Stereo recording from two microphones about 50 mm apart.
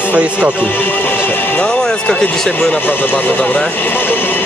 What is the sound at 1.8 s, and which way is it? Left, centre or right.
Speech, left.